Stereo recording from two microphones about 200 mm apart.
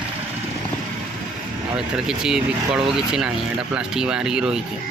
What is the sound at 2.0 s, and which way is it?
Speech, 5° right (ahead or behind).